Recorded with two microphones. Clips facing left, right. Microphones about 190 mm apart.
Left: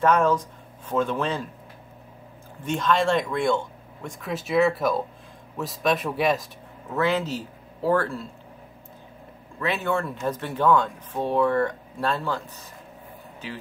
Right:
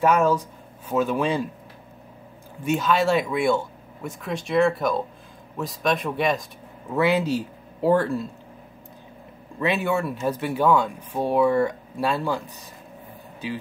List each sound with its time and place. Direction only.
0.0 s speech: 10° right (ahead or behind)
2.6 s speech: 5° right (ahead or behind)
6.9 s speech: 10° right (ahead or behind)
9.6 s speech: 15° right (ahead or behind)